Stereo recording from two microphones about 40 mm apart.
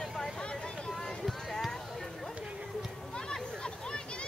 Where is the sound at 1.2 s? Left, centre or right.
Centre.